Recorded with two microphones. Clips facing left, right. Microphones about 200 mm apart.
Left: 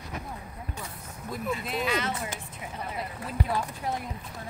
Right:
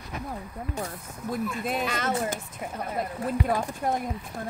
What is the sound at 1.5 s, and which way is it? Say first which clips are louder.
Speech: even; 50° right (ahead or behind).